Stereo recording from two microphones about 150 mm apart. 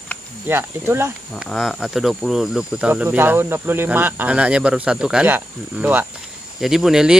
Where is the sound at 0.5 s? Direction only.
15° right (ahead or behind).